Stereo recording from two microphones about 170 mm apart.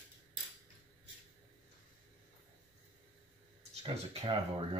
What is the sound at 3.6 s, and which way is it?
Speech, 30° right (ahead or behind).